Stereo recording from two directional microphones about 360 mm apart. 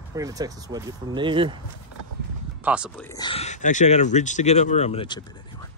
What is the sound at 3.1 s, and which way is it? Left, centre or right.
Speech, centre.